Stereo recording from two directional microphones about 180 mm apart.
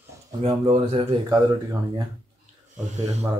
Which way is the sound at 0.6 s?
35° right (ahead or behind).